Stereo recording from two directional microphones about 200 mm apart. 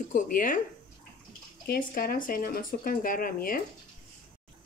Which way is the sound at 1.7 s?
45° left (ahead or behind).